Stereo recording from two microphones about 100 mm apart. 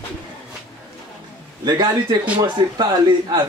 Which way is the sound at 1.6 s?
40° right (ahead or behind).